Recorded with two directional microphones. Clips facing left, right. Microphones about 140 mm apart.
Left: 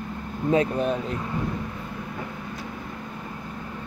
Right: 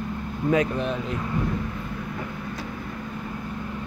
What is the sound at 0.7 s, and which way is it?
Speech, 40° left (ahead or behind).